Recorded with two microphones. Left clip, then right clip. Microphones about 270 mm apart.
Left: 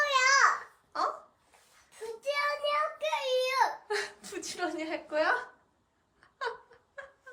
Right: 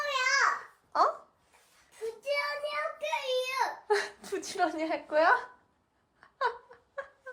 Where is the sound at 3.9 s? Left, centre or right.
Centre.